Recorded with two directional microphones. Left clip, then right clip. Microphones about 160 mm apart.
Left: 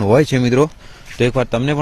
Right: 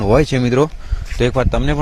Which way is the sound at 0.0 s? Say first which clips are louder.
Left 1 dB; 30° left (ahead or behind).